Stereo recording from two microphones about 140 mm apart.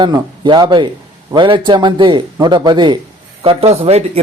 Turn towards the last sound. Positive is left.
turn(degrees=-50)  # may be behind; listen again after turning